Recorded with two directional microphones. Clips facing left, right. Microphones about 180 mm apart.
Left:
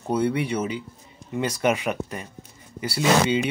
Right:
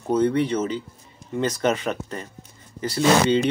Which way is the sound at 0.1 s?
10° left (ahead or behind).